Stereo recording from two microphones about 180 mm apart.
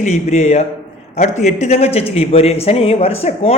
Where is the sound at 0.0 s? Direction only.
40° left (ahead or behind).